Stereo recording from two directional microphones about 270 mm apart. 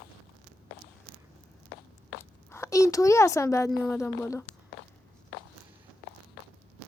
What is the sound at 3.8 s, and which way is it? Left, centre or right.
Speech, centre.